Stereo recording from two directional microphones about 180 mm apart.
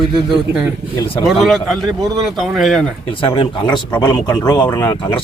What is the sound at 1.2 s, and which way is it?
A man's voice, centre (ahead or behind).